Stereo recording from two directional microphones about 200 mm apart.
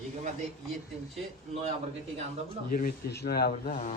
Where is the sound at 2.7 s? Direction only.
45° left (ahead or behind).